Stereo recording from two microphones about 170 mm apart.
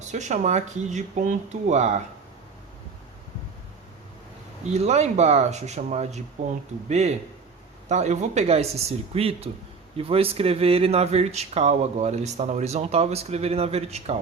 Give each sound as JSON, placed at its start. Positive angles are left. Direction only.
{"t": 0.1, "sound": "speech", "side_deg": -45}
{"t": 4.7, "sound": "speech", "side_deg": -40}